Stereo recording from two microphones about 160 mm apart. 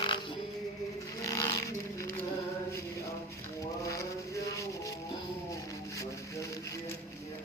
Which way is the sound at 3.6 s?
20° left (ahead or behind).